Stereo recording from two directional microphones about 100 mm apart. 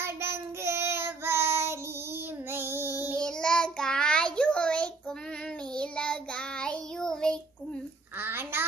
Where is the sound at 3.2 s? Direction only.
10° left (ahead or behind).